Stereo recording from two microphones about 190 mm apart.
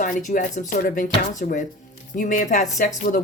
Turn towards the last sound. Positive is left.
turn(degrees=45)  # may be behind; listen again after turning